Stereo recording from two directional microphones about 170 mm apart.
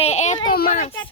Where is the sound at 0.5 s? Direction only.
55° left (ahead or behind).